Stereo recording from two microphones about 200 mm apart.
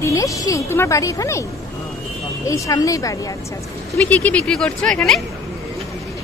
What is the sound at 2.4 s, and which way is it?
Speech, 15° left (ahead or behind).